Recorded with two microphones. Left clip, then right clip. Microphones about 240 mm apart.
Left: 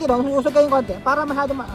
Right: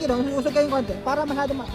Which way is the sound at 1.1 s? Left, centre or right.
Left.